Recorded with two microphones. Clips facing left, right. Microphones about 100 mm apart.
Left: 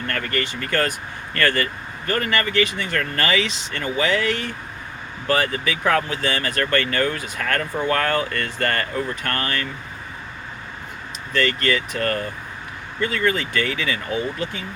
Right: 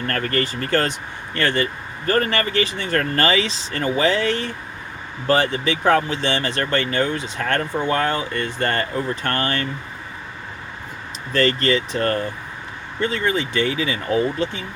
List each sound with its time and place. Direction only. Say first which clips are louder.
0.1 s speech: right 3 dB; 35° right (ahead or behind)
2.0 s speech: right 3 dB; 35° right (ahead or behind)
11.3 s speech: right 3 dB; 35° right (ahead or behind)